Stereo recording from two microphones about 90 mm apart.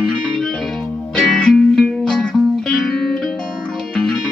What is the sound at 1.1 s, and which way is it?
Music, 10° left (ahead or behind).